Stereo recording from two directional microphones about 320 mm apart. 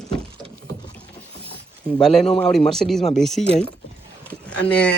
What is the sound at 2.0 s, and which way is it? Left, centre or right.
Speech, centre.